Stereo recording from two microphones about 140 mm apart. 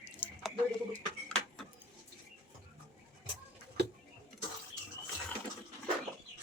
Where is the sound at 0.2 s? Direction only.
15° left (ahead or behind).